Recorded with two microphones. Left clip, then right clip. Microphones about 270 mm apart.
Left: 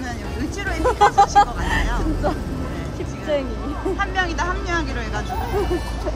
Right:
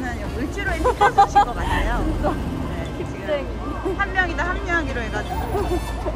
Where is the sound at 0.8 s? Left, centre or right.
Left.